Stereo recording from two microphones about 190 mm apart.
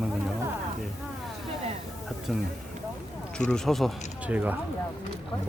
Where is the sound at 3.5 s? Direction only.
Centre (ahead or behind).